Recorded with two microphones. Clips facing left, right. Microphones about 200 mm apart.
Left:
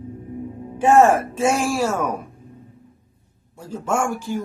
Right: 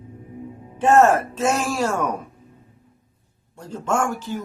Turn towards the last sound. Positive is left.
turn(degrees=10)  # may be behind; listen again after turning